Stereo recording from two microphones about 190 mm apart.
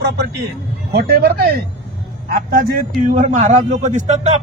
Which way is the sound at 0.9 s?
55° right (ahead or behind).